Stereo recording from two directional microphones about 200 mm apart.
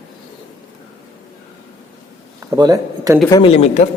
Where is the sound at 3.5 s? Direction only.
35° left (ahead or behind).